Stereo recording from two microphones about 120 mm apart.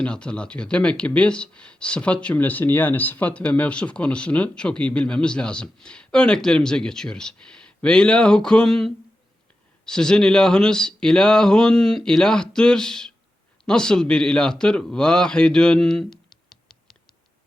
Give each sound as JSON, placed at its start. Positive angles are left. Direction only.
{"t": 0.0, "sound": "a man's voice", "side_deg": 10}